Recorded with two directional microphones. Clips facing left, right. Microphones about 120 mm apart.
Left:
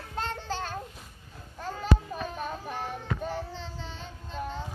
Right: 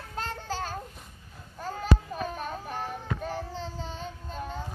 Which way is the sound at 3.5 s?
40° right (ahead or behind).